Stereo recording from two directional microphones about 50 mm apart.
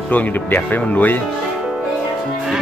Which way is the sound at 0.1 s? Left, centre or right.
Left.